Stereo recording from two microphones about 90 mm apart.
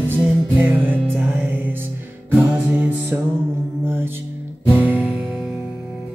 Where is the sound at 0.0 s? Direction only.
20° right (ahead or behind).